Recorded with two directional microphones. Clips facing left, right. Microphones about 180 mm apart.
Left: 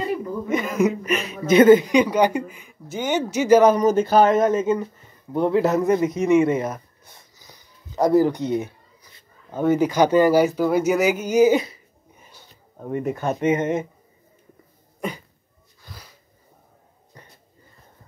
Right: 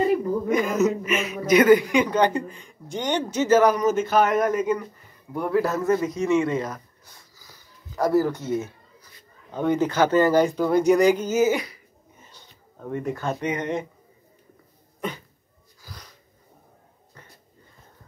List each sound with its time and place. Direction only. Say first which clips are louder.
0.5 s a sound: right 1 dB; centre (ahead or behind)
1.0 s a woman's voice: left 1 dB; 35° left (ahead or behind); by 3.7 s 15° left (ahead or behind)
3.7 s a woman's voice: left 4 dB; 35° left (ahead or behind)
12.2 s speech: left 2 dB; 10° left (ahead or behind)
15.0 s a sound: left 2 dB; 10° left (ahead or behind)
15.8 s wheeze: even; centre (ahead or behind)